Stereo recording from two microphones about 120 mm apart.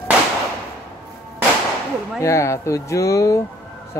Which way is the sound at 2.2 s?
25° left (ahead or behind).